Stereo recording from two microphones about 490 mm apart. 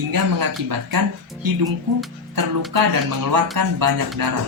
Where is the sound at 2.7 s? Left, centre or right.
Right.